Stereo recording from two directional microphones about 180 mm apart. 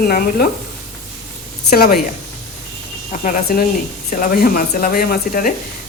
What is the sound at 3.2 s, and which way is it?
Speech, 55° left (ahead or behind).